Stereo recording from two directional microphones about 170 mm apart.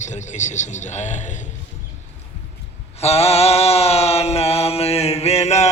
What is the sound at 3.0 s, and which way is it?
Mantra, 40° left (ahead or behind).